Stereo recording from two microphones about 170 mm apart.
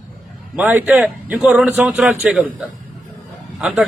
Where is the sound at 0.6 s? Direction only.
10° right (ahead or behind).